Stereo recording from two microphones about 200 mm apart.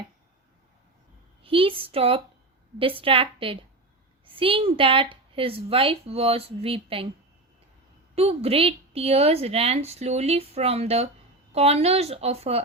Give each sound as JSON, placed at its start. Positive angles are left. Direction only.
{"t": 1.5, "sound": "a woman's voice", "side_deg": -25}
{"t": 8.1, "sound": "a woman's voice", "side_deg": -30}